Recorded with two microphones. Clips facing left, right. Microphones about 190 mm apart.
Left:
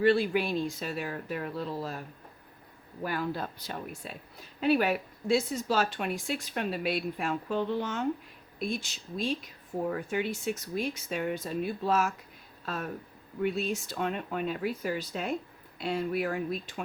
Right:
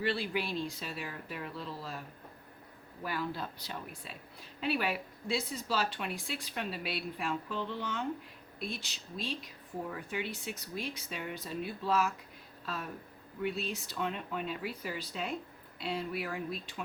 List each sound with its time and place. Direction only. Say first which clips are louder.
0.0 s speech: left 9 dB; 50° left (ahead or behind)
3.0 s speech: left 4 dB; 50° left (ahead or behind)